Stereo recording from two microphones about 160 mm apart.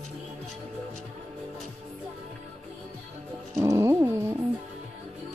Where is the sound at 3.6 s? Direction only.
20° right (ahead or behind).